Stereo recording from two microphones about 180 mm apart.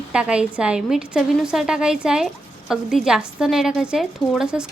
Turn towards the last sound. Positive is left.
turn(degrees=-5)  # may be behind; listen again after turning